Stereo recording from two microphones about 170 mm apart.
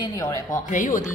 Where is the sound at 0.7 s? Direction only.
50° left (ahead or behind).